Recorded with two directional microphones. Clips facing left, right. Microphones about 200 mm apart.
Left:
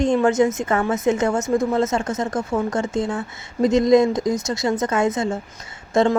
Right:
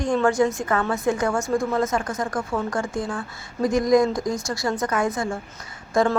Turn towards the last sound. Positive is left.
turn(degrees=25)  # may be behind; listen again after turning